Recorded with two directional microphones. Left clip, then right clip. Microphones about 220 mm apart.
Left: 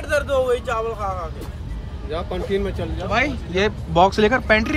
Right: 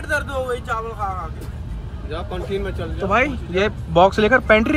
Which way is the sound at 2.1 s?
40° left (ahead or behind).